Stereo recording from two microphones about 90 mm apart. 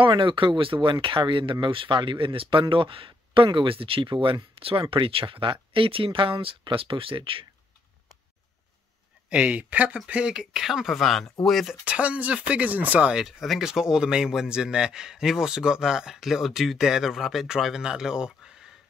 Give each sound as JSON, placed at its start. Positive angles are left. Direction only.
{"t": 0.2, "sound": "speech", "side_deg": -65}
{"t": 9.3, "sound": "speech", "side_deg": -15}
{"t": 11.8, "sound": "speech", "side_deg": -15}